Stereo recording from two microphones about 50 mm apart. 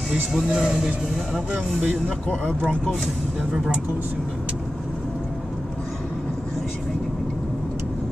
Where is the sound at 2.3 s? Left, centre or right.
Left.